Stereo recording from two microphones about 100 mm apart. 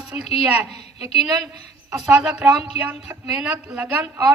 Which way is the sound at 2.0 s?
10° right (ahead or behind).